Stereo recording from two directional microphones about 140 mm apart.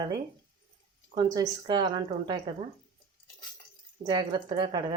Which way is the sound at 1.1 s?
30° right (ahead or behind).